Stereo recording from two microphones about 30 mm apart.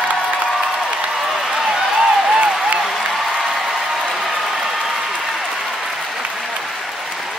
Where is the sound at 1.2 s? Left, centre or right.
Centre.